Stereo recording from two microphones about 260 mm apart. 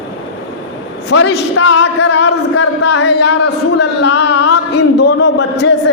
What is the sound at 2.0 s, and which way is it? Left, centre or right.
A man's voice, left.